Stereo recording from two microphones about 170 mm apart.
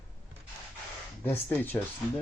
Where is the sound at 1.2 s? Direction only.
10° left (ahead or behind).